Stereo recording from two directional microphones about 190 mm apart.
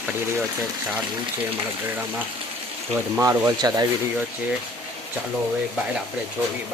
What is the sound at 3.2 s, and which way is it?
Speech, 15° right (ahead or behind).